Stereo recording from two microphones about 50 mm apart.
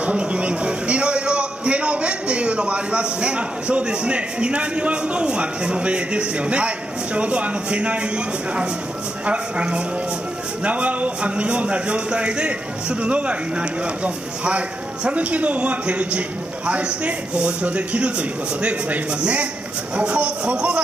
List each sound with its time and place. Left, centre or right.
0.0 s a man's voice: right
9.2 s a man's voice: right